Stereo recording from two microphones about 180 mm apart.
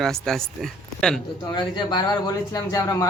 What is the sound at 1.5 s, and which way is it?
Speech, 25° left (ahead or behind).